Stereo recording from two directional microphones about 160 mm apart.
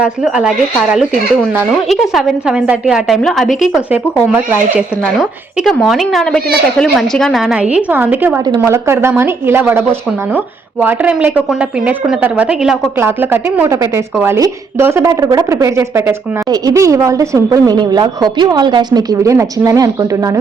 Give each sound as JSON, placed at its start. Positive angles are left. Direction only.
{"t": 0.0, "sound": "a woman's voice", "side_deg": -5}
{"t": 1.9, "sound": "a woman's voice", "side_deg": 0}
{"t": 3.6, "sound": "a woman's voice", "side_deg": -10}
{"t": 5.6, "sound": "a woman's voice", "side_deg": 0}